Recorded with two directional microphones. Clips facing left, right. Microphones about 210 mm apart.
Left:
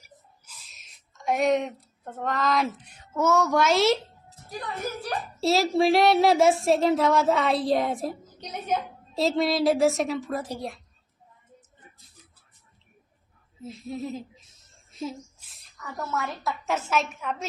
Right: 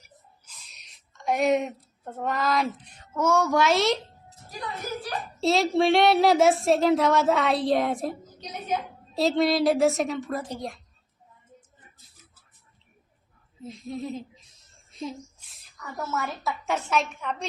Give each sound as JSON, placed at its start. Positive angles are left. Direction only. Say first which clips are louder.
{"t": 0.6, "sound": "a woman's voice", "louder": "even", "side_deg": 0}
{"t": 5.4, "sound": "speech", "louder": "even", "side_deg": 0}
{"t": 8.4, "sound": "a woman's voice", "louder": "left 3 dB", "side_deg": 55}
{"t": 9.1, "sound": "speech", "louder": "right 1 dB", "side_deg": 0}
{"t": 13.6, "sound": "speech", "louder": "even", "side_deg": 5}